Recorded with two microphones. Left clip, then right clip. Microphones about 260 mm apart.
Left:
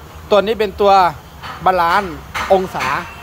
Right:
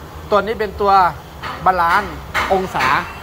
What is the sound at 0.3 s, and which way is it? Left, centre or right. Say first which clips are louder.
Speech: left 3 dB; left.